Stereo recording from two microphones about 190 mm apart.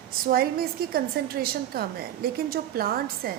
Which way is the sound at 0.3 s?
50° right (ahead or behind).